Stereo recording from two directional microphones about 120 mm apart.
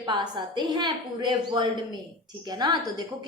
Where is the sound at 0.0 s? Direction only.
40° right (ahead or behind).